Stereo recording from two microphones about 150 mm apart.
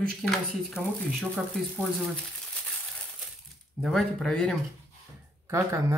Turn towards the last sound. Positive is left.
turn(degrees=-20)  # may be behind; listen again after turning